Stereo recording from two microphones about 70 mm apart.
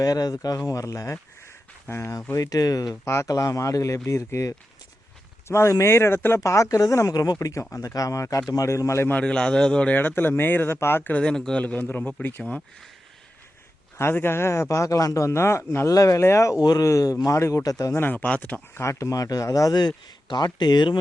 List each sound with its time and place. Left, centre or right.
0.0 s speech: left
1.9 s speech: left
2.3 s speech: left
7.1 s speech: left
7.3 s speech: left
9.0 s a man's voice: centre; by 11.1 s left
11.2 s speech: centre
11.6 s a man's voice: left
14.0 s speech: left
16.6 s speech: left
16.8 s speech: left
17.9 s a man's voice: left
18.7 s speech: left
20.2 s speech: left